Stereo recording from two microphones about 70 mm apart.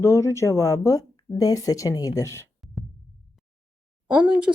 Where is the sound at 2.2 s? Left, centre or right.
Left.